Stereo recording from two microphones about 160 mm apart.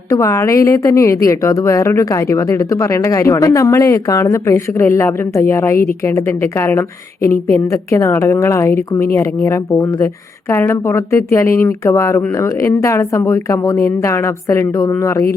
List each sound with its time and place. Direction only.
0.1 s a woman's voice: 20° left (ahead or behind)